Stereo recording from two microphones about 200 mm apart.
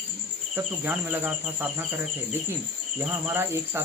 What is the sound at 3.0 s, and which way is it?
Insect, 10° right (ahead or behind).